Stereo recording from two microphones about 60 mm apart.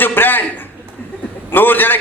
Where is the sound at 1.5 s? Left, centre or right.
Left.